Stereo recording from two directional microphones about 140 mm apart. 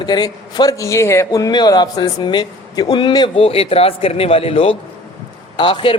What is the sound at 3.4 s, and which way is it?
A man's voice, 45° left (ahead or behind).